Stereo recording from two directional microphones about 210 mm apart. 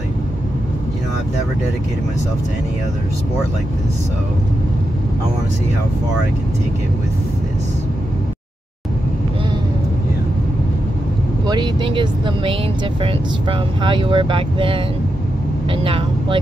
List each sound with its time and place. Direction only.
11.4 s speech: 20° right (ahead or behind)